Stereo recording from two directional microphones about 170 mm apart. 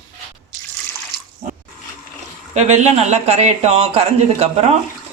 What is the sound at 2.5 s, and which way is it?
Speech, 40° right (ahead or behind).